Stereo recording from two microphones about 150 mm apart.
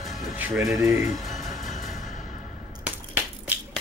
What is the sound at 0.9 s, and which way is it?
Music, centre (ahead or behind).